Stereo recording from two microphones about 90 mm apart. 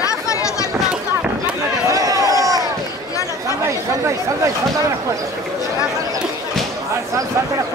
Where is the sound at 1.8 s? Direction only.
40° right (ahead or behind).